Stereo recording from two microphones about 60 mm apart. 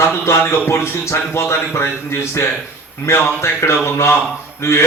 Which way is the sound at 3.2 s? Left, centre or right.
Left.